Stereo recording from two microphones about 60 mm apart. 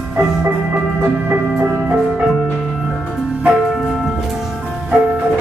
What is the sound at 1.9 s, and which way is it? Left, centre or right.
Music, centre.